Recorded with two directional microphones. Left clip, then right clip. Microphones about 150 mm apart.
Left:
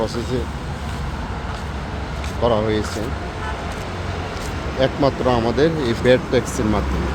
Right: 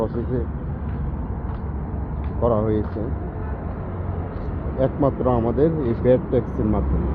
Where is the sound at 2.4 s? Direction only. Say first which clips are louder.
Left 2 dB; 30° left (ahead or behind).